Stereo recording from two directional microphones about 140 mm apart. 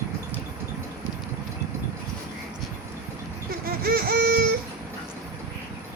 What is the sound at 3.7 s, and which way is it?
Baby cry, 90° right.